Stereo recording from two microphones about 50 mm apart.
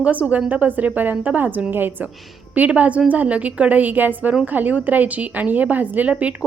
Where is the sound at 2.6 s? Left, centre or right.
Right.